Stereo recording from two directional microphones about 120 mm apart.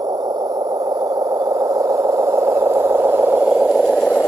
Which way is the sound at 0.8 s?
30° right (ahead or behind).